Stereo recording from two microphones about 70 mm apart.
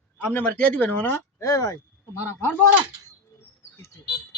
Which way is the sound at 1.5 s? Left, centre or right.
Left.